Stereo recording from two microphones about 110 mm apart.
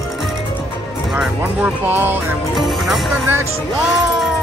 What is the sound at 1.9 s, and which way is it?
Music, 20° right (ahead or behind).